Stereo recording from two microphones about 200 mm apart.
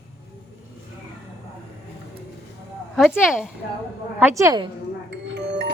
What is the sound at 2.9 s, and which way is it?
A woman's voice, centre (ahead or behind).